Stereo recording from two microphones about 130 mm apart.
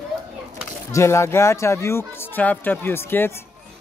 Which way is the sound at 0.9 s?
20° left (ahead or behind).